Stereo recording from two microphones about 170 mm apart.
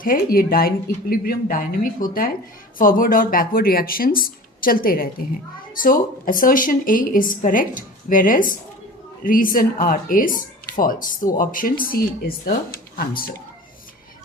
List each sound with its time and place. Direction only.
0.0 s speech: 60° left (ahead or behind)